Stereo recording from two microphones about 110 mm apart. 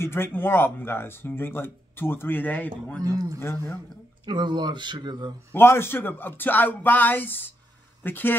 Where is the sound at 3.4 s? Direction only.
20° left (ahead or behind).